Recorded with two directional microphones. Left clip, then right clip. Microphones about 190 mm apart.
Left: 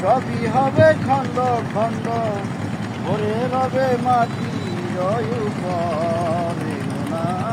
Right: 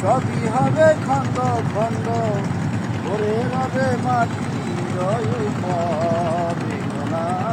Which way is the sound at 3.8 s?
35° left (ahead or behind).